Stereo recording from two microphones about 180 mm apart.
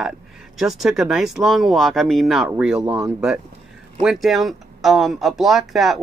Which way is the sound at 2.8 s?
30° right (ahead or behind).